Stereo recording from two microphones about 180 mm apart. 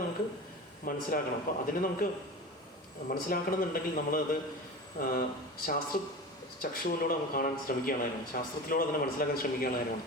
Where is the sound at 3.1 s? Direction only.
55° left (ahead or behind).